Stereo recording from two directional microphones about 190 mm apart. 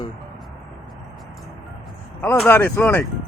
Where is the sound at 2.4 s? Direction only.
10° left (ahead or behind).